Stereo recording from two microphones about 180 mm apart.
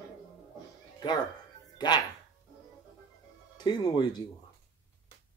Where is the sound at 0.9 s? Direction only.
25° left (ahead or behind).